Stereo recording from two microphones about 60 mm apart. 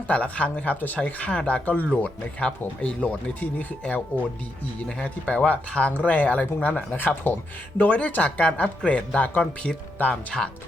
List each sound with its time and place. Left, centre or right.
0.1 s speech: left